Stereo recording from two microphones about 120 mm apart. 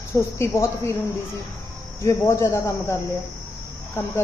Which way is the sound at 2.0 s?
25° left (ahead or behind).